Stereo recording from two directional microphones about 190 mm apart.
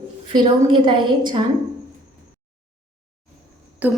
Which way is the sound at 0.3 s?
25° right (ahead or behind).